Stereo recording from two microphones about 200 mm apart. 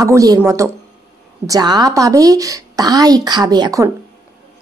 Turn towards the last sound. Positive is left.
turn(degrees=-20)  # may be behind; listen again after turning